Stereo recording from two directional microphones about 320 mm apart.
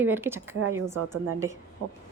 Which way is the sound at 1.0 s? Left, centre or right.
Centre.